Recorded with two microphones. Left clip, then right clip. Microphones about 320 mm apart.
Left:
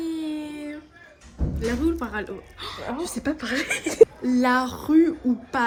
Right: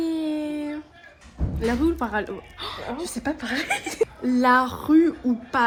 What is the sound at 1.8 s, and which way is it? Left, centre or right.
A woman's voice, centre.